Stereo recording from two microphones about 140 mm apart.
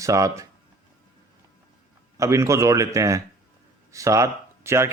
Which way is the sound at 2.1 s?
20° right (ahead or behind).